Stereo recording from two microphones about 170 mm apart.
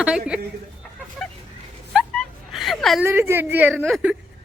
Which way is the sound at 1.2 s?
5° left (ahead or behind).